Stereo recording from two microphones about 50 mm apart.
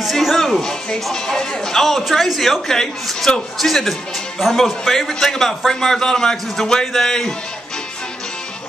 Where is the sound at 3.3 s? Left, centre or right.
Centre.